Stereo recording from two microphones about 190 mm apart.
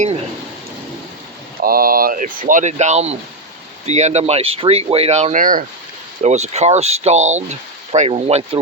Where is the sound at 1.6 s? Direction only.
50° right (ahead or behind).